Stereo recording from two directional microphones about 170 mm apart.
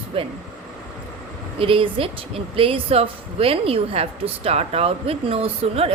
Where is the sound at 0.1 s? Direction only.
35° right (ahead or behind).